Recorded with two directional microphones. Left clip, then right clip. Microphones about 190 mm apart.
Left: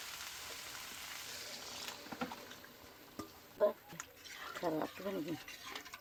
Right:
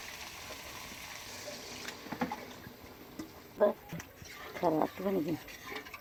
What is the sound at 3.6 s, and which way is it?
Speech, 5° right (ahead or behind).